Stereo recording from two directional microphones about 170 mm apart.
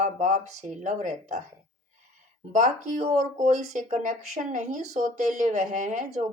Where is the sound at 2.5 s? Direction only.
50° right (ahead or behind).